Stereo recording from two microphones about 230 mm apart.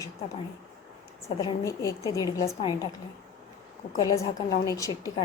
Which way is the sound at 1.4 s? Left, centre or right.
Centre.